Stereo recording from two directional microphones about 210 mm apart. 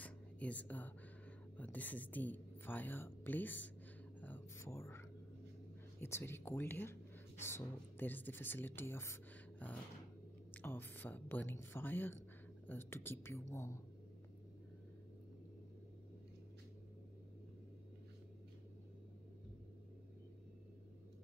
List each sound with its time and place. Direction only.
0.0 s whispering: 5° left (ahead or behind)
1.6 s speech: 10° left (ahead or behind)
4.2 s music: 10° left (ahead or behind)
5.9 s speech: 10° left (ahead or behind)